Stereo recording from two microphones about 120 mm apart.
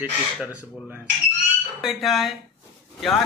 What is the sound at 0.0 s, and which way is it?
Speech, 10° right (ahead or behind).